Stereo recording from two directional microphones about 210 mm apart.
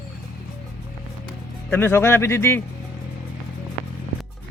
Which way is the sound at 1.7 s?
10° left (ahead or behind).